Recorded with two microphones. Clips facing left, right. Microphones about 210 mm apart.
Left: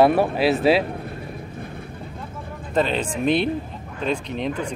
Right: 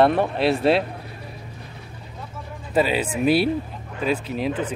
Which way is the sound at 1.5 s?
55° left (ahead or behind).